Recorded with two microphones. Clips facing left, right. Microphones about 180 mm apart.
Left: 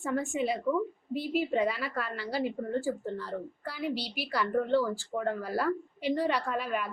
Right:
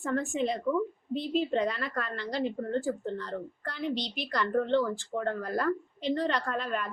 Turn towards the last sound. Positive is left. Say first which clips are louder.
# even
turn(degrees=10)  # may be behind; listen again after turning